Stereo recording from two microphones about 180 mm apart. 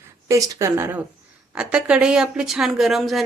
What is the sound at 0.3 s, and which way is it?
Speech, 20° right (ahead or behind).